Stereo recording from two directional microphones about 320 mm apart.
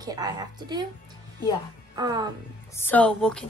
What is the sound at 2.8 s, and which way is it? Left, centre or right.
Speech, centre.